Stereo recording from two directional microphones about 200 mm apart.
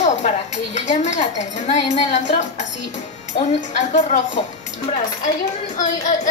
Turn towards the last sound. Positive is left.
turn(degrees=40)  # may be behind; listen again after turning